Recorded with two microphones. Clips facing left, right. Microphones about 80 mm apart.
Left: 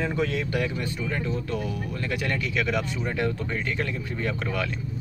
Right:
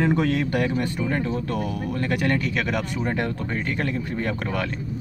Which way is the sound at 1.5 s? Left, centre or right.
Right.